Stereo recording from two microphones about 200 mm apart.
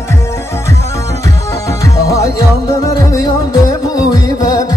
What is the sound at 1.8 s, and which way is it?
Music, 15° left (ahead or behind).